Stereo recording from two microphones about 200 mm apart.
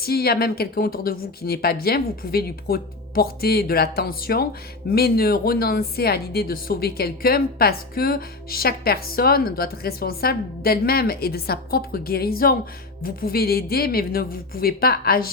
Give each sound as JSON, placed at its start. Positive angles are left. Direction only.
{"t": 0.0, "sound": "speech", "side_deg": 50}